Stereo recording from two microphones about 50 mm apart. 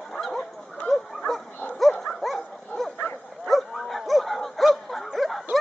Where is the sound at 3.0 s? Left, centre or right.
Left.